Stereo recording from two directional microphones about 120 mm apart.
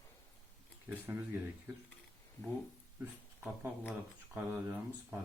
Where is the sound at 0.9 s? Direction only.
20° right (ahead or behind).